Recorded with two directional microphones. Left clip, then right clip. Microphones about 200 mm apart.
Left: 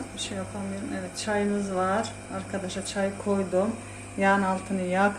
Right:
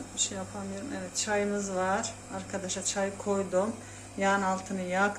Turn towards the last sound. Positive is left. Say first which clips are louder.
# left 4 dB
turn(degrees=0)  # may be behind; listen again after turning